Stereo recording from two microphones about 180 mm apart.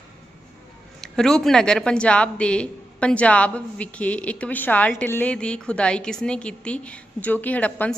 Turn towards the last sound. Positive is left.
turn(degrees=10)  # may be behind; listen again after turning